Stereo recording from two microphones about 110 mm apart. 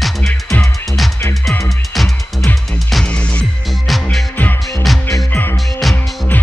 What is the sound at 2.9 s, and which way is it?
Music, 5° left (ahead or behind).